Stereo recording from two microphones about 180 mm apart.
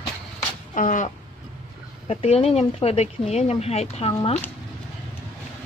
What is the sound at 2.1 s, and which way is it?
Speech, 35° left (ahead or behind).